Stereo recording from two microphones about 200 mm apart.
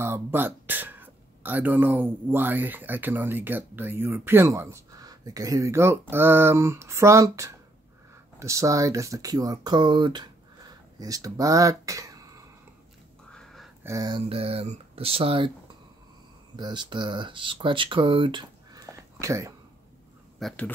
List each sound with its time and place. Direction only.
0.0 s speech: 10° right (ahead or behind)
13.3 s a sound: centre (ahead or behind)
13.8 s speech: 20° right (ahead or behind)
16.5 s speech: 20° right (ahead or behind)
20.3 s speech: 5° left (ahead or behind)